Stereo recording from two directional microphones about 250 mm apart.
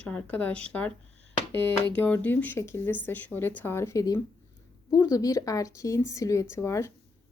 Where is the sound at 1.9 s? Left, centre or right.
Centre.